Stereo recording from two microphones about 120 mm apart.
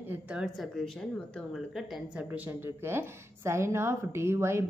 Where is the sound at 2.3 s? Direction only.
15° right (ahead or behind).